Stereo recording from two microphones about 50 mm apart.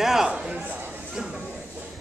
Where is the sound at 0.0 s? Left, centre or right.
Centre.